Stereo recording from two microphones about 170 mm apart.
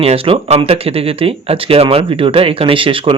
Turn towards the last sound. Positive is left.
turn(degrees=-30)  # may be behind; listen again after turning